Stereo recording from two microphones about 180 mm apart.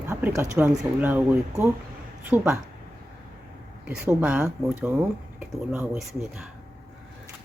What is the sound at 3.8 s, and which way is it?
Speech, 10° right (ahead or behind).